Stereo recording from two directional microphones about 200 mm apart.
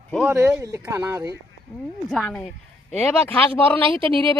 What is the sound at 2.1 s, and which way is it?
Speech, centre (ahead or behind).